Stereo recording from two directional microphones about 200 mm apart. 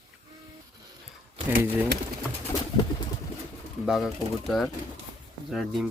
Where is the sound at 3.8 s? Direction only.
Centre (ahead or behind).